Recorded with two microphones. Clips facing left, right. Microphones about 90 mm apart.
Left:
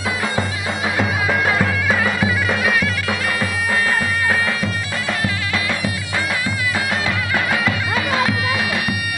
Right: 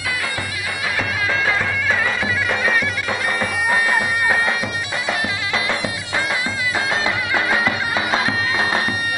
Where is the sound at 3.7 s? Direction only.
15° right (ahead or behind).